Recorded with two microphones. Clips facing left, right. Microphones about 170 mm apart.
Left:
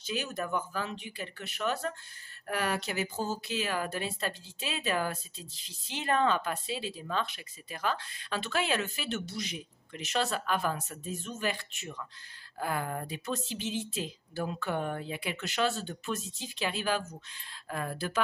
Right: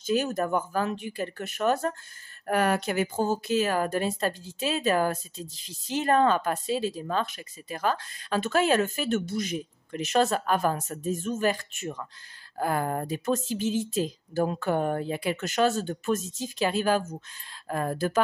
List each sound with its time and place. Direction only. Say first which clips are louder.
0.0 s speech: right 9 dB; 45° right (ahead or behind)